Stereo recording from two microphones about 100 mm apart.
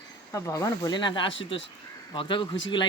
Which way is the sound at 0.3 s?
30° left (ahead or behind).